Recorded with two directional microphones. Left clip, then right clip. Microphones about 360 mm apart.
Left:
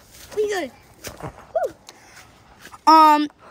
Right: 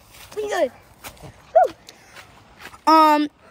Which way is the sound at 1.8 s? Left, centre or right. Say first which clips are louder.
Right 1 dB; centre.